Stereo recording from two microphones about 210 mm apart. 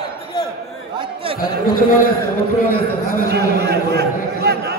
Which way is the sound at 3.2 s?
50° right (ahead or behind).